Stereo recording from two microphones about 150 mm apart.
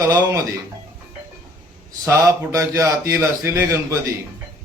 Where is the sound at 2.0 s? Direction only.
20° right (ahead or behind).